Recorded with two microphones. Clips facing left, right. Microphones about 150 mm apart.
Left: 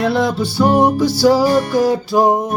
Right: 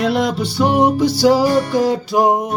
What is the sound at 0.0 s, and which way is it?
Music, 15° right (ahead or behind).